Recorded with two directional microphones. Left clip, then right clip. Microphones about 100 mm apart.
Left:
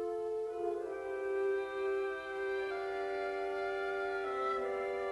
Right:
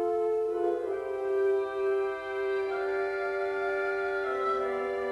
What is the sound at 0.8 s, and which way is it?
Music, 30° left (ahead or behind).